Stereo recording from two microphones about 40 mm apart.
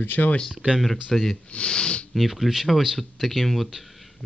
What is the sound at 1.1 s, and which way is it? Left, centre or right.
Speech, centre.